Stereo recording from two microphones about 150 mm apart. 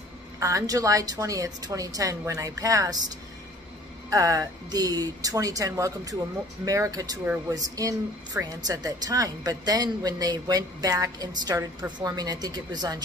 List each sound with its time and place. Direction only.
0.4 s a woman's voice: 20° right (ahead or behind)
4.1 s a woman's voice: 20° right (ahead or behind)